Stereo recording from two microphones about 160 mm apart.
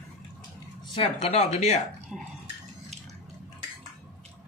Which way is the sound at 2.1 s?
5° right (ahead or behind).